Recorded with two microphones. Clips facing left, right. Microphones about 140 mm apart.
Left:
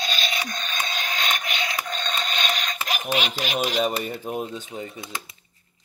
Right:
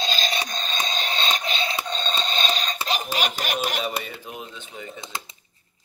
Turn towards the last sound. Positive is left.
turn(degrees=-25)  # may be behind; listen again after turning